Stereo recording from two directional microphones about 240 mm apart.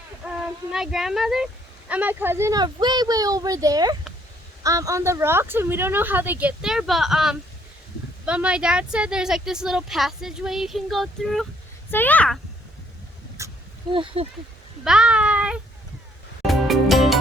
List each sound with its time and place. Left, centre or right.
0.3 s a child's voice: centre
13.4 s a sound: centre
13.9 s speech: right
14.8 s speech: centre
16.5 s music: centre